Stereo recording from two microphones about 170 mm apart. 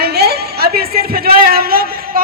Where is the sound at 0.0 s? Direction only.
70° right (ahead or behind).